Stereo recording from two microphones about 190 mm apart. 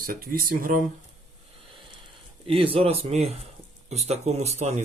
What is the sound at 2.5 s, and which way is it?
Speech, 30° right (ahead or behind).